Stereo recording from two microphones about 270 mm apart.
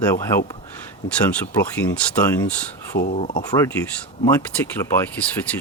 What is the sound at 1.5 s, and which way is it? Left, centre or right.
Speech, centre.